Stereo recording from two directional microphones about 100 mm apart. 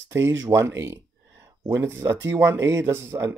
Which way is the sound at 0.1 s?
25° right (ahead or behind).